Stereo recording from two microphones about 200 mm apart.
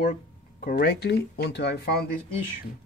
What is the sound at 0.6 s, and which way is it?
Speech, 50° left (ahead or behind).